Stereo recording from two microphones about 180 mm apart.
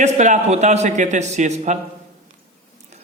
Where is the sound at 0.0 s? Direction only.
40° right (ahead or behind).